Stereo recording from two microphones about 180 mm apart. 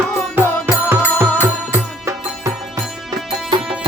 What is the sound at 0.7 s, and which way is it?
Music, 10° right (ahead or behind).